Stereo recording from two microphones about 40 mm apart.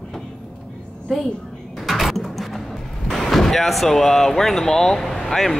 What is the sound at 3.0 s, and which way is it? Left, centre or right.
Speech, centre.